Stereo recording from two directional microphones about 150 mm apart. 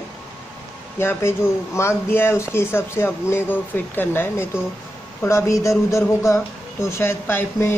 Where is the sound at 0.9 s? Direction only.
15° left (ahead or behind).